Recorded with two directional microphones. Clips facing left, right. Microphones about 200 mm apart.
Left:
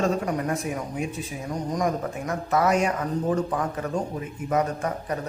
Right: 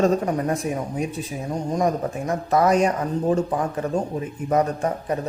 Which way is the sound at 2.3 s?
35° right (ahead or behind).